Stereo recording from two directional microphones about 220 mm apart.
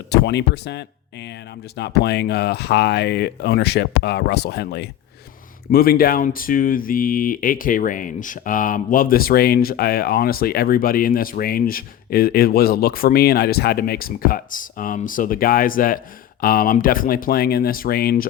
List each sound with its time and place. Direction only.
0.1 s speech: 50° left (ahead or behind)